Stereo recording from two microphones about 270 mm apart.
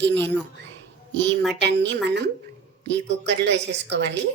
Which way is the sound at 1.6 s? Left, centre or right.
Right.